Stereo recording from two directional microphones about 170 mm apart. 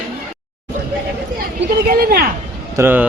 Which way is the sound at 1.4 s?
60° right (ahead or behind).